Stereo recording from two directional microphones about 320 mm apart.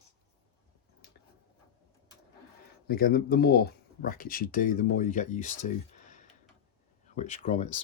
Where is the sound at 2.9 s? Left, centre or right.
Left.